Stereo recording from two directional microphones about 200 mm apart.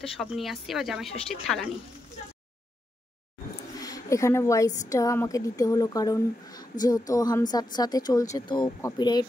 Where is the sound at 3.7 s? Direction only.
15° left (ahead or behind).